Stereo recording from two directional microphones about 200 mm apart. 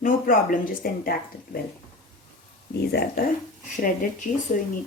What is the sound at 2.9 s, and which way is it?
Speech, 55° left (ahead or behind).